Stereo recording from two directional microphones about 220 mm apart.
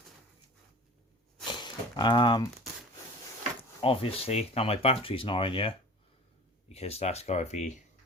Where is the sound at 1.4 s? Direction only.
20° left (ahead or behind).